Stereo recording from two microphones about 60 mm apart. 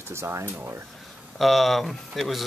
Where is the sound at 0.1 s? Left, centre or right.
Right.